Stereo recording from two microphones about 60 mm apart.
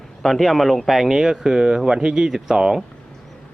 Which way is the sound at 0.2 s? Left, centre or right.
Centre.